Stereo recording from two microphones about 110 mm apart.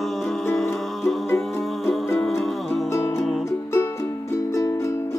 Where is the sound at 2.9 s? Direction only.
25° left (ahead or behind).